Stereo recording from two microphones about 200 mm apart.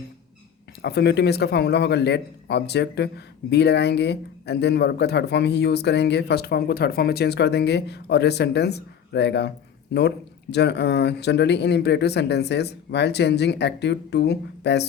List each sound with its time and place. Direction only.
0.8 s a man's voice: 55° left (ahead or behind)
10.5 s a man's voice: 55° left (ahead or behind)